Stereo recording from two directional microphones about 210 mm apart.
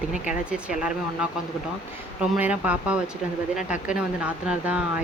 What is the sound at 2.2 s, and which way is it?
Speech, 5° right (ahead or behind).